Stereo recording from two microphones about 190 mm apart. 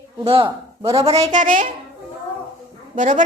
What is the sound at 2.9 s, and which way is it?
Speech, 45° right (ahead or behind).